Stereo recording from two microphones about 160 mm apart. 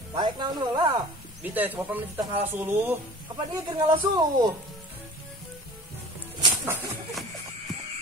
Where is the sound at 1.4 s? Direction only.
10° right (ahead or behind).